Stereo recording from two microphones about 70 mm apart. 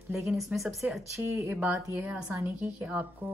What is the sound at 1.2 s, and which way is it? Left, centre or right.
Speech, right.